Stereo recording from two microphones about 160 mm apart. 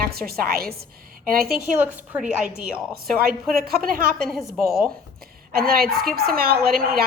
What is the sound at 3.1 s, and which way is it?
Speech, 70° right (ahead or behind).